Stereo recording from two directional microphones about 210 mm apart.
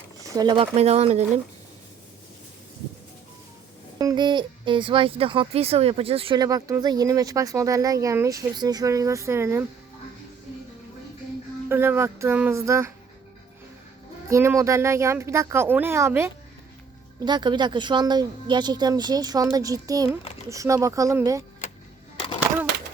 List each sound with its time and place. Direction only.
0.2 s speech: 15° right (ahead or behind)
3.9 s speech: 20° right (ahead or behind)
11.7 s speech: 10° right (ahead or behind)
14.3 s speech: 15° right (ahead or behind)